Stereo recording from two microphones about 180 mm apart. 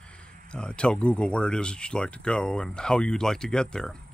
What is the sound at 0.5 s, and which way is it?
Speech, 5° left (ahead or behind).